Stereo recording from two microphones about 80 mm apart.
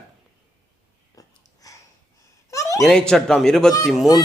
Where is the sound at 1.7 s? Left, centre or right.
Left.